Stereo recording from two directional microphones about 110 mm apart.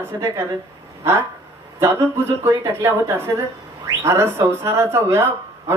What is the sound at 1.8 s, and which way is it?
Speech, 25° right (ahead or behind).